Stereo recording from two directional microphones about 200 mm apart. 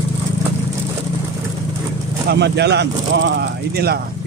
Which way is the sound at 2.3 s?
55° right (ahead or behind).